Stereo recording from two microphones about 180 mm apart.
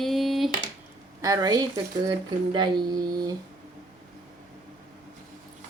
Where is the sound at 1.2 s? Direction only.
20° right (ahead or behind).